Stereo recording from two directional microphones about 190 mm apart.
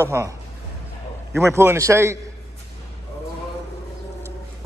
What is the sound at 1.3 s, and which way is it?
Speech, 15° right (ahead or behind).